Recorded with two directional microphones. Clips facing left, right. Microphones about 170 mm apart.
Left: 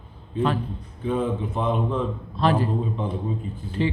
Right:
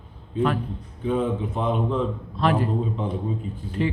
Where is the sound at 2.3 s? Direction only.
30° left (ahead or behind).